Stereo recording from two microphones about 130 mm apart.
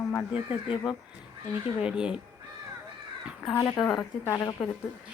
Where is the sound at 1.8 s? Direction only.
10° right (ahead or behind).